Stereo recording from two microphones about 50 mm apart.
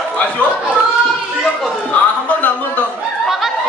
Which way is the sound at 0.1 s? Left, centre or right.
Left.